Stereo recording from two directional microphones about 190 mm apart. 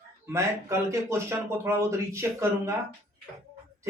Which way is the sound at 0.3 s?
15° right (ahead or behind).